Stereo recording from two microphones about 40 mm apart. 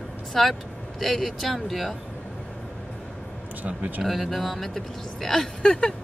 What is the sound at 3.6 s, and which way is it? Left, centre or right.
Speech, right.